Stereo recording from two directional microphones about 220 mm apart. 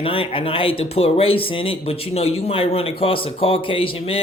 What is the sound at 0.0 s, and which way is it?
Speech, 25° left (ahead or behind).